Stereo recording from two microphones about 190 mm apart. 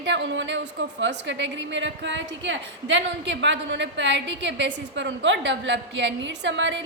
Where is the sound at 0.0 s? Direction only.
70° right (ahead or behind).